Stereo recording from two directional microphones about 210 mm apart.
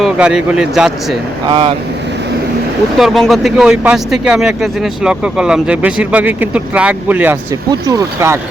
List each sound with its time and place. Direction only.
0.0 s speech: 5° right (ahead or behind)
1.5 s speech: 25° right (ahead or behind)
3.0 s speech: centre (ahead or behind)
7.7 s speech: 20° right (ahead or behind)